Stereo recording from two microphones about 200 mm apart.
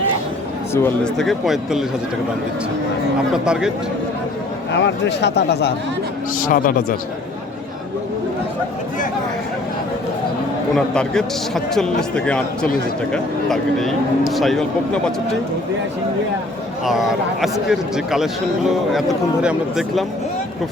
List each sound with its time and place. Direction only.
0.7 s speech: 10° left (ahead or behind)
1.1 s a man's voice: centre (ahead or behind)
3.4 s a man's voice: 5° right (ahead or behind)
4.7 s speech: 60° left (ahead or behind)
6.4 s speech: 45° left (ahead or behind)
10.8 s a man's voice: 5° left (ahead or behind)
13.5 s a man's voice: centre (ahead or behind)
16.8 s a man's voice: centre (ahead or behind)